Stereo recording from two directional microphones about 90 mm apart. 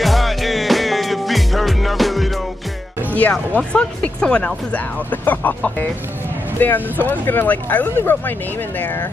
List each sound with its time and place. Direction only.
0.0 s music: centre (ahead or behind)
3.2 s speech: 15° left (ahead or behind)